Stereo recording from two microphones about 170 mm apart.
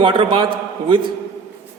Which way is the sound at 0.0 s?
30° right (ahead or behind).